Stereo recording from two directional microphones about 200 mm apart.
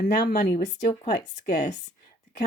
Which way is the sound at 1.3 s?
35° left (ahead or behind).